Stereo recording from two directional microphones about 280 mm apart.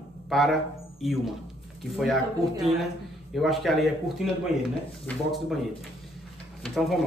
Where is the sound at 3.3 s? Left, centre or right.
Centre.